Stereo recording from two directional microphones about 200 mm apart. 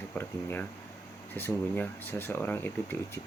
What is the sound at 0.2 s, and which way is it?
Speech, 10° left (ahead or behind).